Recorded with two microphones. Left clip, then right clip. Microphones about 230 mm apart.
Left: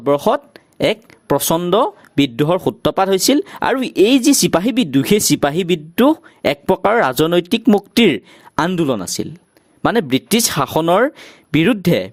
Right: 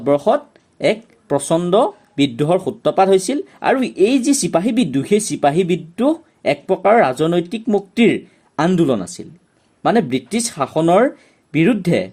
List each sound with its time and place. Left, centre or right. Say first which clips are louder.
0.0 s speech: even; left